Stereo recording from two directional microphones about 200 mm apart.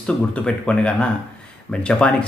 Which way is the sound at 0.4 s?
5° left (ahead or behind).